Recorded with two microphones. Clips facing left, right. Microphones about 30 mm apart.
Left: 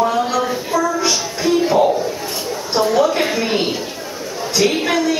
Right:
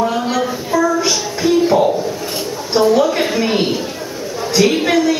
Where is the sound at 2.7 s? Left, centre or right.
Centre.